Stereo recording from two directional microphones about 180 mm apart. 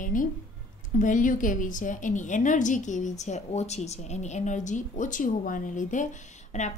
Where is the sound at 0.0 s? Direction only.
50° left (ahead or behind).